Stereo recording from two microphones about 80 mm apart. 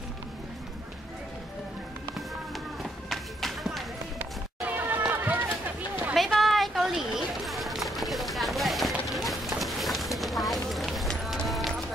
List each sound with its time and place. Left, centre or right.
2.8 s run: centre
4.2 s run: right
6.1 s a sound: centre
10.1 s run: centre
11.4 s clip-clop: centre